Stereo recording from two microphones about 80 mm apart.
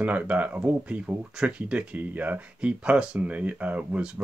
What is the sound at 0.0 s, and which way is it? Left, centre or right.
Speech, centre.